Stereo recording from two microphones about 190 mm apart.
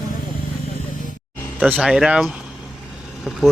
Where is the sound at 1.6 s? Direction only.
5° right (ahead or behind).